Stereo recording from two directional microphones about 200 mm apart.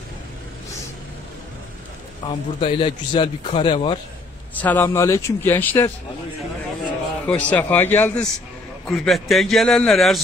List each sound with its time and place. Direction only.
2.2 s a man's voice: 25° left (ahead or behind)
4.6 s speech: 10° left (ahead or behind)
7.2 s a man's voice: 5° left (ahead or behind)